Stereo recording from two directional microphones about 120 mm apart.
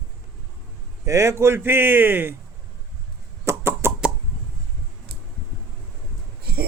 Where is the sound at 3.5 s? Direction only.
20° right (ahead or behind).